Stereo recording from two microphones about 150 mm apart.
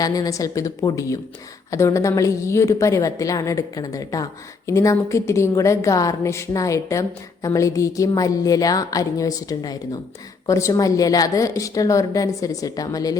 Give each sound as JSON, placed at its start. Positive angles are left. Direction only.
{"t": 0.0, "sound": "a woman's voice", "side_deg": 25}